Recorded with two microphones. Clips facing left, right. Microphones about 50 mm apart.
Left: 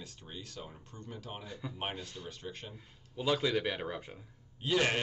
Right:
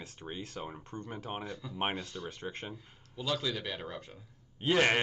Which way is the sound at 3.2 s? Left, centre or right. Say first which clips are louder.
Left 4 dB; centre.